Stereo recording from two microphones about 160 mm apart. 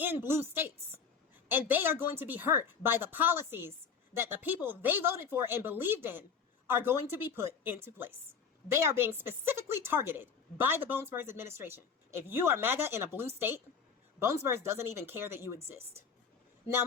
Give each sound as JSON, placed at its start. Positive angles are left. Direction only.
{"t": 0.0, "sound": "a woman's voice", "side_deg": -15}